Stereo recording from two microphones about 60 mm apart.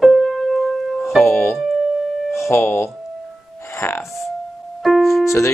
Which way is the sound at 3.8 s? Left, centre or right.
Left.